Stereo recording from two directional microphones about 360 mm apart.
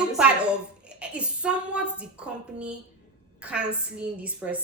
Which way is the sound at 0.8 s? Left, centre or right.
Centre.